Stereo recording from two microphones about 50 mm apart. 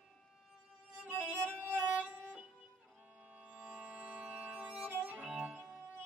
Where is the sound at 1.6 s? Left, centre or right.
Right.